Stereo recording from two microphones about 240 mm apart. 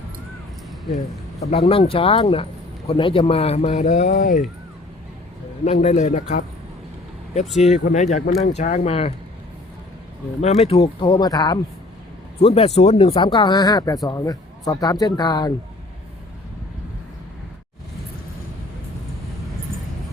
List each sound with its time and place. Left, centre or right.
1.4 s speech: left
5.6 s speech: left
7.5 s speech: left
10.6 s speech: left